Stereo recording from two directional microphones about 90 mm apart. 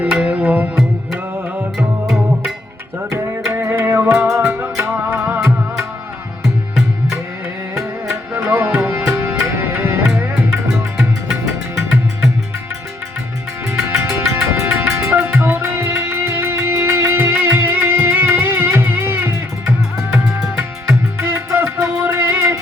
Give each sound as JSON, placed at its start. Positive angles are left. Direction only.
{"t": 0.0, "sound": "music", "side_deg": -15}
{"t": 3.1, "sound": "music", "side_deg": -30}
{"t": 8.4, "sound": "music", "side_deg": -25}
{"t": 10.7, "sound": "music", "side_deg": 0}
{"t": 13.9, "sound": "music", "side_deg": -30}
{"t": 20.8, "sound": "music", "side_deg": -25}